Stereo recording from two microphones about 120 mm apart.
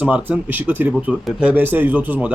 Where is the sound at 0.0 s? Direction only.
15° right (ahead or behind).